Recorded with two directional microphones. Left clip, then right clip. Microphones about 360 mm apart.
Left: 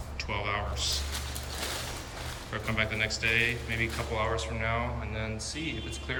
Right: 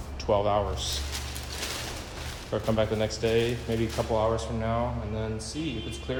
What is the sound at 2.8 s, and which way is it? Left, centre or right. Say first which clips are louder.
Speech: even; centre.